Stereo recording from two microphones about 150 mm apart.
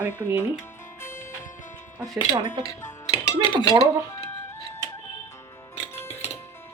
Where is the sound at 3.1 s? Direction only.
35° left (ahead or behind).